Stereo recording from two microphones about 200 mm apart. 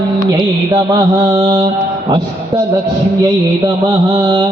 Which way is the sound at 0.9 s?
20° right (ahead or behind).